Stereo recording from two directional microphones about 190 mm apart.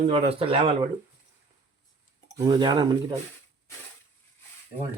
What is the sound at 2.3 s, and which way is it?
Speech, 20° right (ahead or behind).